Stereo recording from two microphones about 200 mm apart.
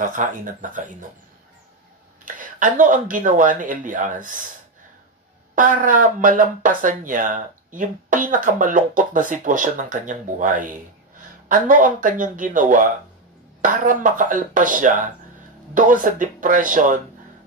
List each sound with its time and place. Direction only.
0.0 s speech: 40° right (ahead or behind)
2.2 s speech: 40° right (ahead or behind)
5.5 s speech: 40° right (ahead or behind)